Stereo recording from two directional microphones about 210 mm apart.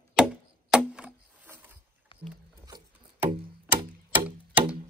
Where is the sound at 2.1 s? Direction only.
25° left (ahead or behind).